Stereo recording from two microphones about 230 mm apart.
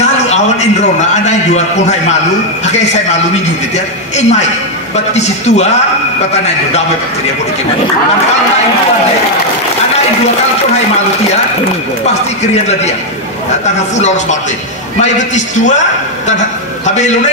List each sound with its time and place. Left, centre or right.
0.0 s a man's voice: left
13.9 s a man's voice: left